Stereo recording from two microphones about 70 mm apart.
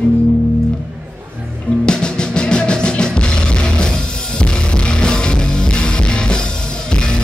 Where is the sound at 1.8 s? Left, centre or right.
Centre.